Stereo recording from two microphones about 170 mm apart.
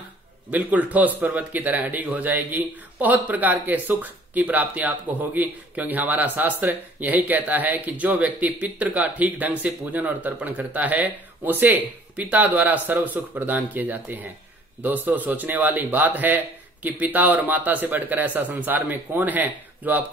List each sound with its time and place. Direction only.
0.5 s speech: 10° right (ahead or behind)